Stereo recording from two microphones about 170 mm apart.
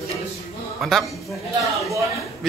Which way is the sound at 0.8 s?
Centre (ahead or behind).